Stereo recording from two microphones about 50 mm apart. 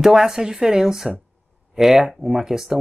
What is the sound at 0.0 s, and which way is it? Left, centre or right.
Speech, centre.